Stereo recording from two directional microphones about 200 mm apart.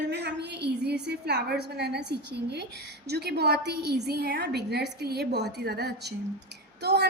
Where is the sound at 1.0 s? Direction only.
55° right (ahead or behind).